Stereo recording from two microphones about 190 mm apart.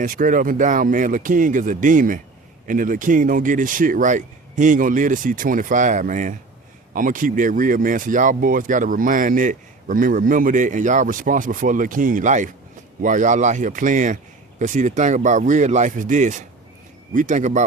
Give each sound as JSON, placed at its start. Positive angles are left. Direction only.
{"t": 0.0, "sound": "speech", "side_deg": -45}